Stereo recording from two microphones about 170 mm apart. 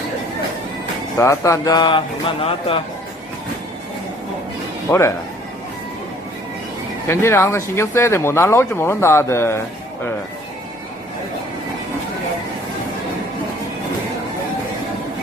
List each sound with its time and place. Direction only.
1.2 s speech: 20° left (ahead or behind)
4.9 s speech: 15° left (ahead or behind)
7.1 s speech: 15° left (ahead or behind)